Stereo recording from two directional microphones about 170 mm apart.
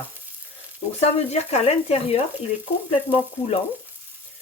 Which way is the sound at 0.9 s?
40° left (ahead or behind).